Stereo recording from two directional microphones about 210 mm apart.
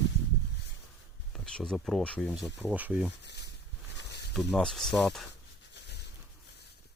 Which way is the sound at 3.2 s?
55° left (ahead or behind).